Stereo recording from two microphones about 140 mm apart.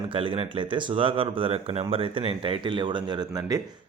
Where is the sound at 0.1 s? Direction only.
40° right (ahead or behind).